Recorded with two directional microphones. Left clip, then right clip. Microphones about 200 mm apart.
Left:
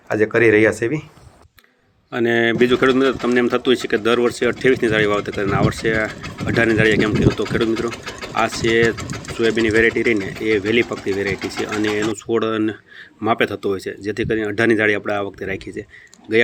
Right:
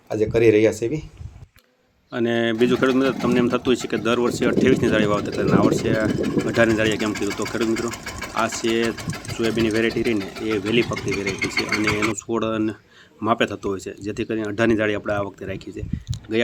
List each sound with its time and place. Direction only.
0.1 s speech: 5° left (ahead or behind)
2.1 s speech: centre (ahead or behind)